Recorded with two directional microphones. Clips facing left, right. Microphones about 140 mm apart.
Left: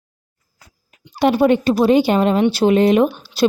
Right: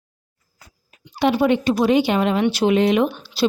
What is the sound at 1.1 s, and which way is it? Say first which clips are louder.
A woman's voice: left 3 dB; 40° left (ahead or behind).